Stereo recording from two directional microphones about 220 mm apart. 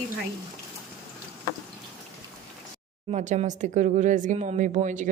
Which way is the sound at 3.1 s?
30° right (ahead or behind).